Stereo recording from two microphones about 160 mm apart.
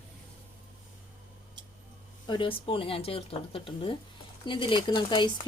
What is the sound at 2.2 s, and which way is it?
Speech, 30° left (ahead or behind).